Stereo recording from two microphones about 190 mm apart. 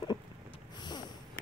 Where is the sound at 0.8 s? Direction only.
20° left (ahead or behind).